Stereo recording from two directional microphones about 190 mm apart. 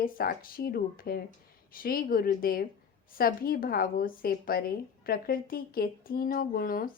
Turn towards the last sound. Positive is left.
turn(degrees=50)  # may be behind; listen again after turning